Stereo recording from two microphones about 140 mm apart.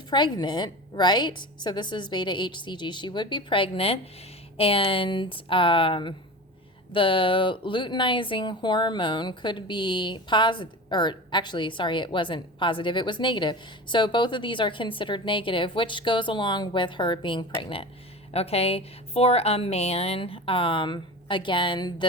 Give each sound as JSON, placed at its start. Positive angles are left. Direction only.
{"t": 0.1, "sound": "speech", "side_deg": 30}